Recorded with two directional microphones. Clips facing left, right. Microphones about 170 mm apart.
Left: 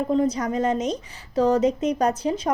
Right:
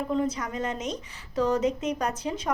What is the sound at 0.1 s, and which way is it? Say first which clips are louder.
Speech: left 7 dB; 35° left (ahead or behind).